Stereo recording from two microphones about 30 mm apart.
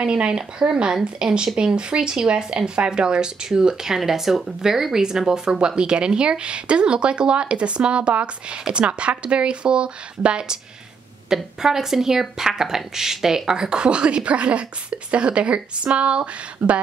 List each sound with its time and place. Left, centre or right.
0.0 s a woman's voice: right
11.2 s speech: centre
13.5 s a woman's voice: right